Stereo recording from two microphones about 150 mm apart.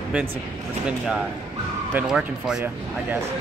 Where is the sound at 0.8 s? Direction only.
Centre (ahead or behind).